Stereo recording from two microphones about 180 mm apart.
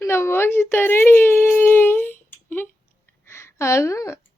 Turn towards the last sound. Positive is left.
turn(degrees=15)  # may be behind; listen again after turning